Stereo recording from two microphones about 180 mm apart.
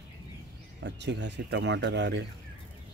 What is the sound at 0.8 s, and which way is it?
Speech, 75° right (ahead or behind).